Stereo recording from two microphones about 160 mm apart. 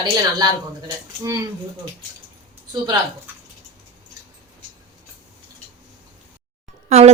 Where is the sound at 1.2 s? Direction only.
20° right (ahead or behind).